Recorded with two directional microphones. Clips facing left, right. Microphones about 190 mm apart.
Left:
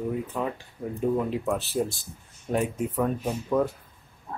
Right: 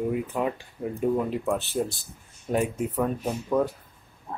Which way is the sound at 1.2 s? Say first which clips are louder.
Right 1 dB; centre (ahead or behind).